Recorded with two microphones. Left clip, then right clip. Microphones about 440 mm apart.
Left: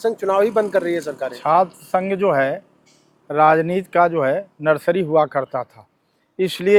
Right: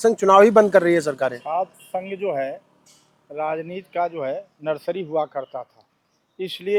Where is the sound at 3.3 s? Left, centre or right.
Left.